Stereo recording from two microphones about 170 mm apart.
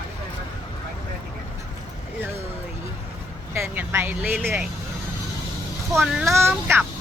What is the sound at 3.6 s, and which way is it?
Speech, 15° right (ahead or behind).